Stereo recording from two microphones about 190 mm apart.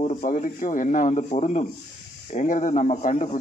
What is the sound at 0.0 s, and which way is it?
Speech, 40° left (ahead or behind).